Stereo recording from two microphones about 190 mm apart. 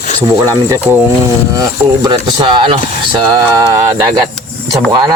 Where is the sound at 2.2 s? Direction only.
25° right (ahead or behind).